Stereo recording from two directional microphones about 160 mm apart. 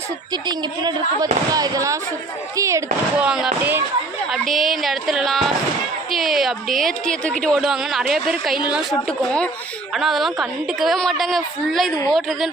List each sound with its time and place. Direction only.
0.4 s a woman's voice: 25° right (ahead or behind)
3.2 s speech: 5° right (ahead or behind)
4.3 s speech: centre (ahead or behind)